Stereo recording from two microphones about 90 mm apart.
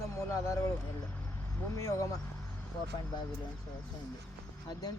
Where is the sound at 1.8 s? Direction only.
35° left (ahead or behind).